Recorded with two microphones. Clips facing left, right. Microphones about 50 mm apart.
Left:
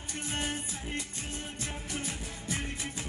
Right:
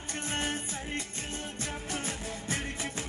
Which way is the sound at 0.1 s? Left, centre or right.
Right.